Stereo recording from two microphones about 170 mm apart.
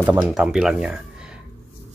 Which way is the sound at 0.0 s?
10° right (ahead or behind).